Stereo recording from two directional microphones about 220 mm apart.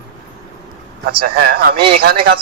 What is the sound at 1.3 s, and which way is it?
Speech, 45° right (ahead or behind).